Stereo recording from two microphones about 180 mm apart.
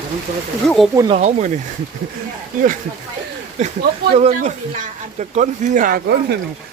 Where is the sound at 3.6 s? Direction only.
40° right (ahead or behind).